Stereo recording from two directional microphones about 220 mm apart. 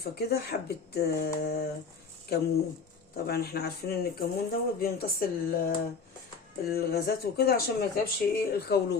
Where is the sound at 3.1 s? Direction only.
45° left (ahead or behind).